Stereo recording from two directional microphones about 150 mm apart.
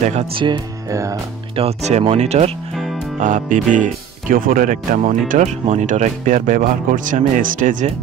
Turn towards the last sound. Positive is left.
turn(degrees=-55)  # may be behind; listen again after turning